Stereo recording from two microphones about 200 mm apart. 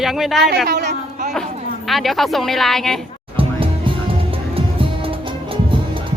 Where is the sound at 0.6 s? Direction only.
55° right (ahead or behind).